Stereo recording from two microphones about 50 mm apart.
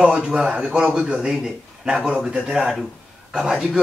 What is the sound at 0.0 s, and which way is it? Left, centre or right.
A man's voice, centre.